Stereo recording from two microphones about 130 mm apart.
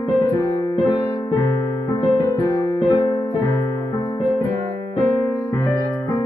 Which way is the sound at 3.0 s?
25° left (ahead or behind).